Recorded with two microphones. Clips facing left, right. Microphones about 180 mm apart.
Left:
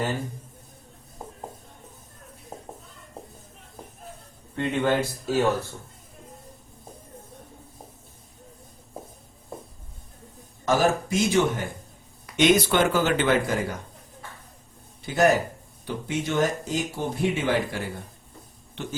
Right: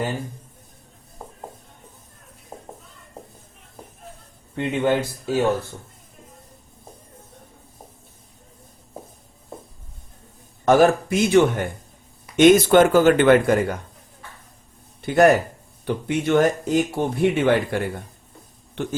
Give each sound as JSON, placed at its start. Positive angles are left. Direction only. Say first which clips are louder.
{"t": 4.5, "sound": "speech", "louder": "right 3 dB", "side_deg": -15}
{"t": 10.7, "sound": "speech", "louder": "right 7 dB", "side_deg": -60}
{"t": 12.4, "sound": "speech", "louder": "right 7 dB", "side_deg": -50}
{"t": 15.0, "sound": "speech", "louder": "right 5 dB", "side_deg": -60}